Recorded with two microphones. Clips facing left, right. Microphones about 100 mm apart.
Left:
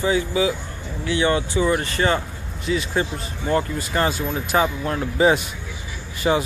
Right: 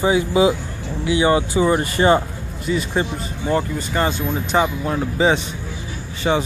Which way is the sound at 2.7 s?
Centre (ahead or behind).